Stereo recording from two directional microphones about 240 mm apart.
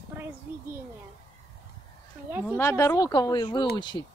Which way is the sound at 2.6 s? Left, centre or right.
Centre.